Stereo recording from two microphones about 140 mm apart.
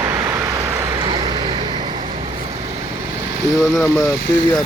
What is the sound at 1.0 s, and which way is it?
Vehicle, 30° right (ahead or behind).